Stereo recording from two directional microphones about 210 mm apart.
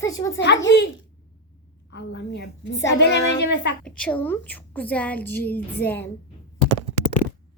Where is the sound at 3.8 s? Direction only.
5° left (ahead or behind).